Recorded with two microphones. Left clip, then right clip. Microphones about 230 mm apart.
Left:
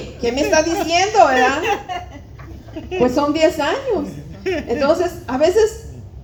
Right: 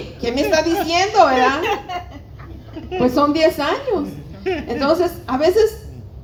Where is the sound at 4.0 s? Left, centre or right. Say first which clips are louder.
Even; left.